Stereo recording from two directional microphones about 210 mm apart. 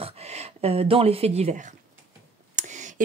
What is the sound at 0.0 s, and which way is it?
Speech, 30° right (ahead or behind).